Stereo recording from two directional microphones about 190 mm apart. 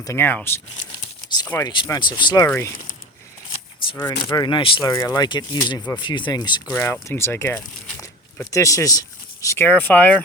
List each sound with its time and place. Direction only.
0.0 s speech: 15° left (ahead or behind)
3.8 s a sound: 25° left (ahead or behind)
4.3 s speech: 25° left (ahead or behind); by 10.2 s 10° left (ahead or behind)